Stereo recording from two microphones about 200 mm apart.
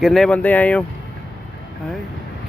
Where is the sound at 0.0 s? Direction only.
Centre (ahead or behind).